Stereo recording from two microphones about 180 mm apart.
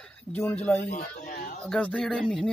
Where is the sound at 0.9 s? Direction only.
50° left (ahead or behind).